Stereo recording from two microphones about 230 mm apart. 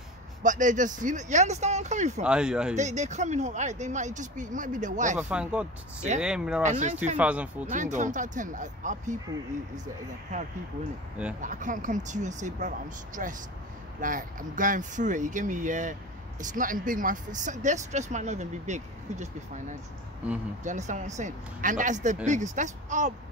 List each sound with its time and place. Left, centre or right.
0.4 s speech: right
2.2 s speech: centre
2.7 s speech: right
5.3 s speech: centre
6.6 s speech: right
7.2 s speech: centre
7.7 s speech: right
11.4 s speech: right
20.6 s speech: right